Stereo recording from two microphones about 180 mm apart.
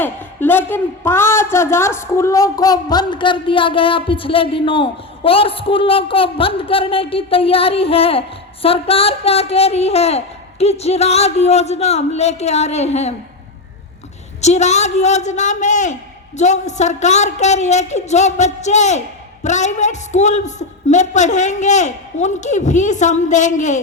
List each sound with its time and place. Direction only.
0.0 s a man's voice: 10° left (ahead or behind); by 13.1 s 35° left (ahead or behind)
14.4 s a woman's voice: 40° left (ahead or behind)